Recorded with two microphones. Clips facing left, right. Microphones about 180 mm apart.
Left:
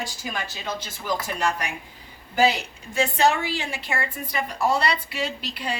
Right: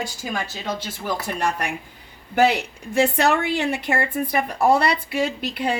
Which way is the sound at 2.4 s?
60° right (ahead or behind).